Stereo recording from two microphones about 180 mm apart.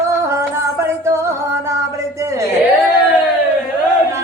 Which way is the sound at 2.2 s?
15° right (ahead or behind).